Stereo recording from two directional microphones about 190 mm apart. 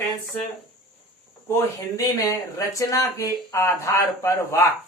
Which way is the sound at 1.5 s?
15° left (ahead or behind).